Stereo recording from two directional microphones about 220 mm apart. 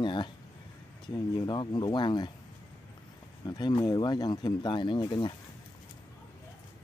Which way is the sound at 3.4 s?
20° left (ahead or behind).